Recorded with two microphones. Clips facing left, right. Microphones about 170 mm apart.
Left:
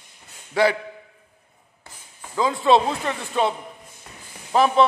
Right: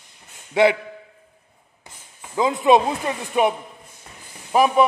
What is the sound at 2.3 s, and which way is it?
A man's voice, 20° right (ahead or behind).